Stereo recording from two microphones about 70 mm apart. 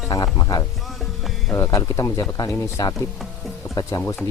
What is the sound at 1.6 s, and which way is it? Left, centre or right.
Speech, left.